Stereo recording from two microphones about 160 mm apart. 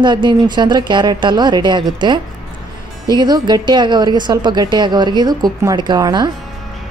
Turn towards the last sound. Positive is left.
turn(degrees=-25)  # may be behind; listen again after turning